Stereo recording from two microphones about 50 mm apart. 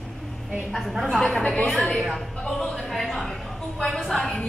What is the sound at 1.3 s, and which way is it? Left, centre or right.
A woman's voice, centre.